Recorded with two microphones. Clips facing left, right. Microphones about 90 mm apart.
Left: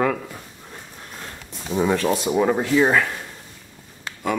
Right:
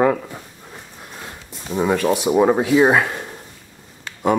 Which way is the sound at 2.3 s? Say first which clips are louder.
Right 5 dB; 15° right (ahead or behind).